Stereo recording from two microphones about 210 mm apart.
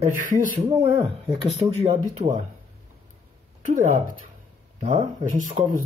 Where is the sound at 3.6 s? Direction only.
35° right (ahead or behind).